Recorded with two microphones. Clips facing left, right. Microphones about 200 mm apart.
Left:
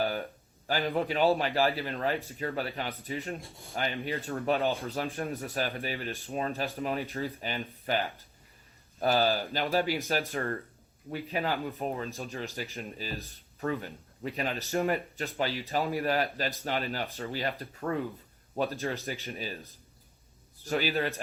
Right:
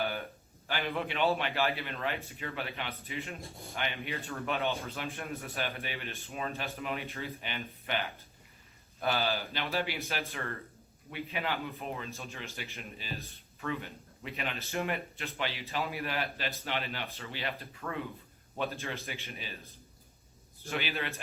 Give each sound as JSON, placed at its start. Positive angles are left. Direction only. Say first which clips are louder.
{"t": 0.0, "sound": "a sound", "louder": "left 4 dB", "side_deg": 35}
{"t": 0.7, "sound": "speech", "louder": "left 5 dB", "side_deg": 35}
{"t": 20.7, "sound": "speech", "louder": "left 7 dB", "side_deg": 40}